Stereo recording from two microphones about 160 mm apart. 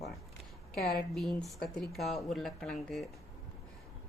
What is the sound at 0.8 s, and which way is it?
Speech, 70° left (ahead or behind).